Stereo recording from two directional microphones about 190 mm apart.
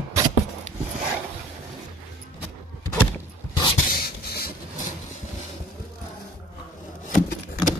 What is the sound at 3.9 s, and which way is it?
Beatboxing, 55° left (ahead or behind).